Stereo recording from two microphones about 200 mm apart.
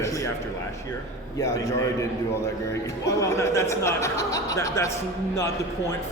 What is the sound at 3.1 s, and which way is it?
Speech, 15° left (ahead or behind).